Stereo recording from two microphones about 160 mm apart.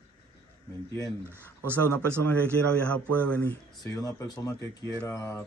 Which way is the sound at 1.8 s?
10° left (ahead or behind).